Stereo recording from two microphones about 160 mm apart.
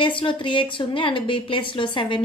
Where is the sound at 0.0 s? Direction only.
30° left (ahead or behind).